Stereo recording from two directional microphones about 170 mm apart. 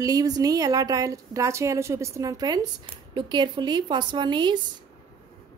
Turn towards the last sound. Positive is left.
turn(degrees=-25)  # may be behind; listen again after turning